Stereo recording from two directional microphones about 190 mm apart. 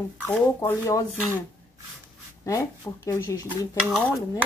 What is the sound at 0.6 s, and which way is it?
Speech, 15° left (ahead or behind).